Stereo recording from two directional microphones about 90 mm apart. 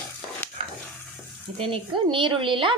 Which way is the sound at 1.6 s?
70° right (ahead or behind).